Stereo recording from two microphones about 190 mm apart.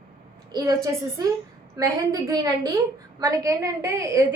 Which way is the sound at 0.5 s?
20° right (ahead or behind).